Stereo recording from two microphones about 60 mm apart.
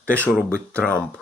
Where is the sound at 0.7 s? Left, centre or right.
Left.